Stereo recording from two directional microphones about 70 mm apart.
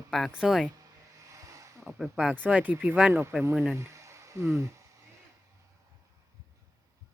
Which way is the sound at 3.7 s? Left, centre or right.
Right.